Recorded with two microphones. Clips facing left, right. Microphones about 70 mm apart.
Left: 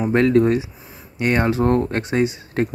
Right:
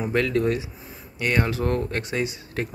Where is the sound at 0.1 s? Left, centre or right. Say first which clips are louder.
Left 7 dB; left.